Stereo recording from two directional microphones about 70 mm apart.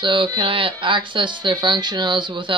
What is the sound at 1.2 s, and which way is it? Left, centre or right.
Speech, right.